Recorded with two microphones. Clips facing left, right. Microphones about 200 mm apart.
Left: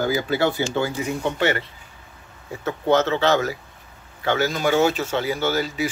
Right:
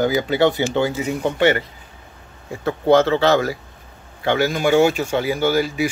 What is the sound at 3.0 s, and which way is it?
Speech, 35° right (ahead or behind).